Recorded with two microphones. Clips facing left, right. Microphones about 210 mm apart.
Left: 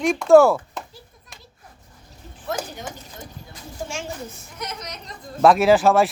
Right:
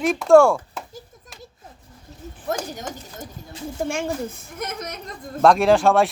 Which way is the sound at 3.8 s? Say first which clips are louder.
Right 6 dB; 55° right (ahead or behind).